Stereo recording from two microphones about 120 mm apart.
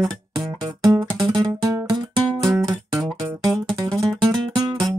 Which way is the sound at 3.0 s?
25° right (ahead or behind).